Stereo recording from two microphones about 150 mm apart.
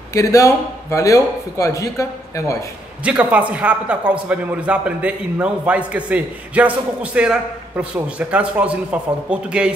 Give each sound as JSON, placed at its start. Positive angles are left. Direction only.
{"t": 0.1, "sound": "a man's voice", "side_deg": 20}
{"t": 3.0, "sound": "a man's voice", "side_deg": -10}